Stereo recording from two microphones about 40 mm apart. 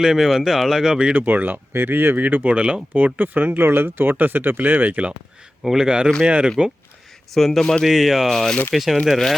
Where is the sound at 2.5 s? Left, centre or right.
Right.